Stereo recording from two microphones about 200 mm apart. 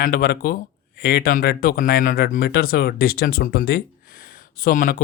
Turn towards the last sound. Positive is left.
turn(degrees=45)  # may be behind; listen again after turning